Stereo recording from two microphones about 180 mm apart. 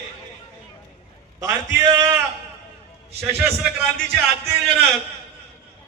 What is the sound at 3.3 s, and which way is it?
Speech, centre (ahead or behind).